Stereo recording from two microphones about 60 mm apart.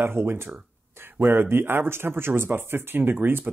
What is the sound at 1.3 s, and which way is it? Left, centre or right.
Speech, right.